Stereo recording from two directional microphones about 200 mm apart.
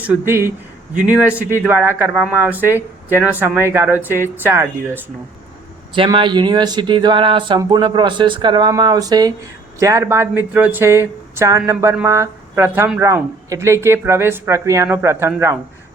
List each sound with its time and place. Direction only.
0.0 s speech: 10° right (ahead or behind)
5.9 s speech: 25° right (ahead or behind)